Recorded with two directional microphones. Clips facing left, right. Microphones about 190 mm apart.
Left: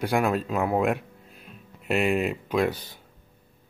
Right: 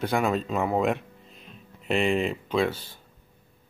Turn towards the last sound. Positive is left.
turn(degrees=20)  # may be behind; listen again after turning